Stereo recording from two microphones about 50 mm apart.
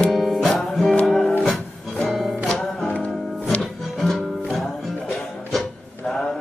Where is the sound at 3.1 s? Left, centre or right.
Centre.